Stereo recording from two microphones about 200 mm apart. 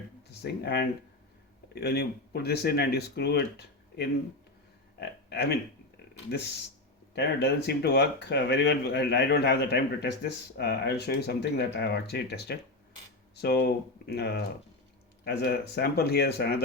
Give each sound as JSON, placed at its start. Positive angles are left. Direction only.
{"t": 0.3, "sound": "speech", "side_deg": 55}
{"t": 4.9, "sound": "a sound", "side_deg": 55}
{"t": 7.2, "sound": "speech", "side_deg": 55}